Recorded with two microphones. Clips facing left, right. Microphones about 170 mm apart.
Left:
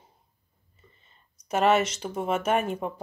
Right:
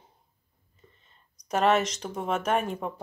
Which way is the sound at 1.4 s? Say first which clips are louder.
Left 1 dB; 5° left (ahead or behind).